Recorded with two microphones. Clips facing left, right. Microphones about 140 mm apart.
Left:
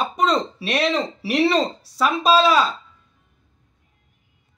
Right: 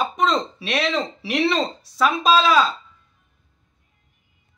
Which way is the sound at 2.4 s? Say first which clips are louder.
Even; 5° left (ahead or behind).